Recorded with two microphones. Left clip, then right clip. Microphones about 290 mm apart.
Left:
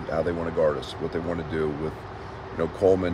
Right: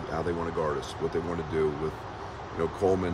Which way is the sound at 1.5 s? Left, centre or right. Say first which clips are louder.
Right 1 dB; centre.